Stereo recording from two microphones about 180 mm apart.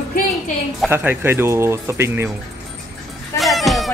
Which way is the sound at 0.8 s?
15° right (ahead or behind).